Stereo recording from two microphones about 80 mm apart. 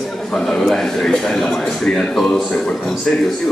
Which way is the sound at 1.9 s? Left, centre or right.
Centre.